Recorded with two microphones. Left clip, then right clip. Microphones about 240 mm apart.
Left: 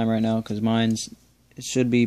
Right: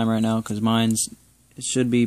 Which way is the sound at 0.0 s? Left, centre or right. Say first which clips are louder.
Right 1 dB; centre.